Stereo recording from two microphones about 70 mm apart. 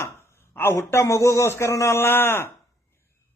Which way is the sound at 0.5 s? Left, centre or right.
Left.